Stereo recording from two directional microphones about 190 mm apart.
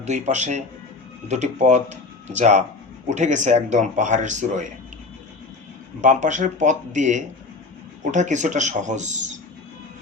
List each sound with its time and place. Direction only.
0.0 s speech: 35° right (ahead or behind)
6.0 s speech: 40° right (ahead or behind)